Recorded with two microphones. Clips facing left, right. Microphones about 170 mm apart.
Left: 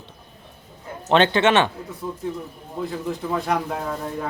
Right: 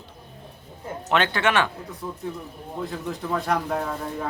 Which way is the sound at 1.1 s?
25° left (ahead or behind).